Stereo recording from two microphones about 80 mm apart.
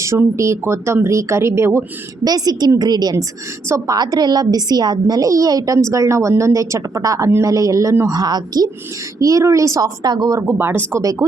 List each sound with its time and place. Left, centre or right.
0.0 s speech: right
2.2 s a woman's voice: right
9.1 s a woman's voice: right
10.0 s a woman's voice: right
10.4 s speech: right
11.0 s a woman's voice: right